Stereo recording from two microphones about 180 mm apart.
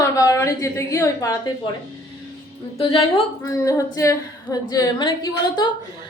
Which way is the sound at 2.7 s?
30° left (ahead or behind).